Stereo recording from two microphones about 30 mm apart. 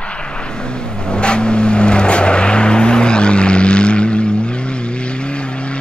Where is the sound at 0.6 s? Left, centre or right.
Left.